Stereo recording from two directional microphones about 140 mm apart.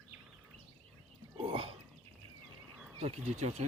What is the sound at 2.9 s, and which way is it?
Speech, 45° right (ahead or behind).